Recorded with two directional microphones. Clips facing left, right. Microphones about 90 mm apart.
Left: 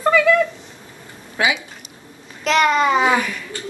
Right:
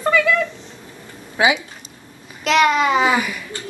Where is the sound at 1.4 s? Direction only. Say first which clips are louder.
Right 3 dB; 15° right (ahead or behind).